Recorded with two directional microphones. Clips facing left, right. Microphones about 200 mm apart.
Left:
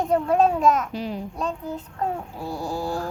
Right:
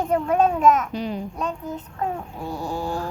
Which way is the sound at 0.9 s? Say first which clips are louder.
Right 2 dB; centre (ahead or behind).